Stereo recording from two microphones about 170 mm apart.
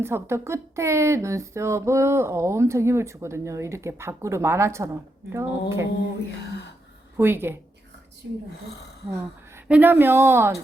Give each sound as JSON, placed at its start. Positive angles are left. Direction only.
{"t": 0.0, "sound": "a woman's voice", "side_deg": -15}
{"t": 7.2, "sound": "a woman's voice", "side_deg": -15}
{"t": 8.5, "sound": "speech", "side_deg": 75}
{"t": 9.1, "sound": "a woman's voice", "side_deg": -10}